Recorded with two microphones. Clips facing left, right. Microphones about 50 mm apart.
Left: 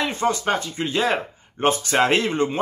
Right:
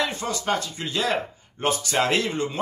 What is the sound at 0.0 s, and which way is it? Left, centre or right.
A man's voice, left.